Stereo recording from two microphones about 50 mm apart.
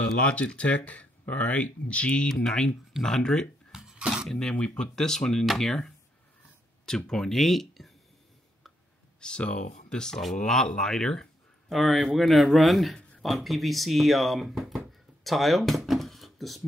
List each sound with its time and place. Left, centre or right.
0.2 s speech: left
3.7 s a sound: centre
4.3 s speech: centre
4.6 s speech: left
4.9 s speech: centre
7.1 s speech: centre
9.2 s speech: left
11.7 s speech: centre
14.6 s a sound: centre
15.2 s speech: centre